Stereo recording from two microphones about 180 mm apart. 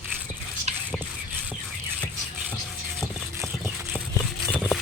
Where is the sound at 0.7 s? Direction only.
35° right (ahead or behind).